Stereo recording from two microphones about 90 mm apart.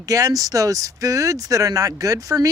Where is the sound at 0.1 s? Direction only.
40° right (ahead or behind).